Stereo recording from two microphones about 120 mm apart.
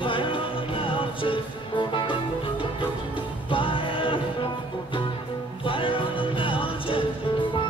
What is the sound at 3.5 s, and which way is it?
Music, 45° left (ahead or behind).